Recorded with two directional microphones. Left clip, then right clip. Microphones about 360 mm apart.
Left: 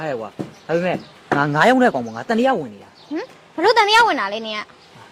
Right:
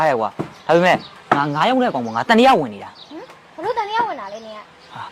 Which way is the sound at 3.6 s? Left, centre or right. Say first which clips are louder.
Left 7 dB; left.